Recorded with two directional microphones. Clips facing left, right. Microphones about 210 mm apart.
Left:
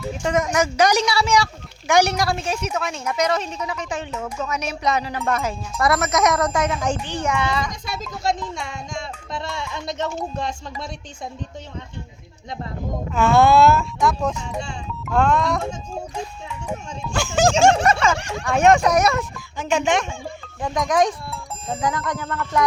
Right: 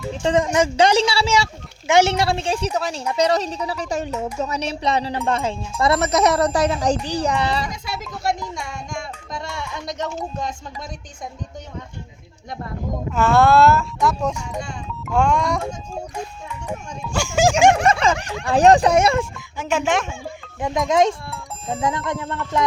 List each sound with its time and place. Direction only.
0.1 s a woman's voice: 30° right (ahead or behind)
9.6 s speech: 25° left (ahead or behind)
13.1 s speech: centre (ahead or behind)
16.6 s speech: 5° right (ahead or behind)
17.8 s a woman's voice: 30° right (ahead or behind)
19.5 s speech: 5° right (ahead or behind)
20.6 s speech: 20° right (ahead or behind)